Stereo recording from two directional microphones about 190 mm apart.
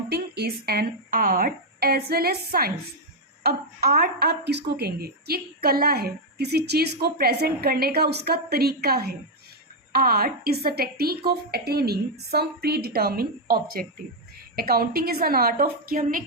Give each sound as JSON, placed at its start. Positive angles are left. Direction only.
{"t": 0.1, "sound": "a woman's voice", "side_deg": -55}